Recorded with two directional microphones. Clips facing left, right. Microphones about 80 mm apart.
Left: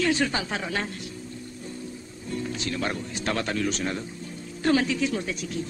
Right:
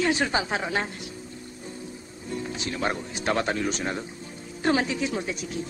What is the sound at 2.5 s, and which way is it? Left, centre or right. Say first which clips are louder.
A woman's voice: right 2 dB; centre.